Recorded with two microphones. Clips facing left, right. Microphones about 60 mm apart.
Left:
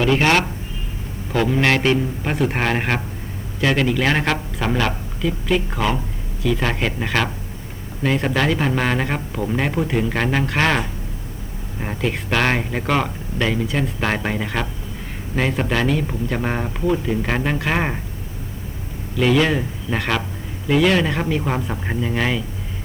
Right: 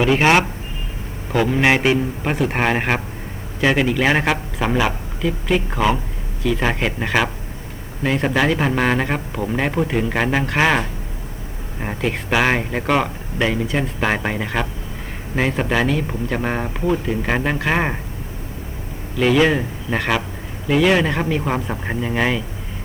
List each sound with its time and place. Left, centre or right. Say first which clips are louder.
0.0 s speech: right 2 dB; centre
19.1 s speech: right 2 dB; centre